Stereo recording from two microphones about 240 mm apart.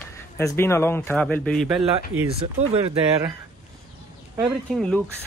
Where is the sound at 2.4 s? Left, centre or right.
Right.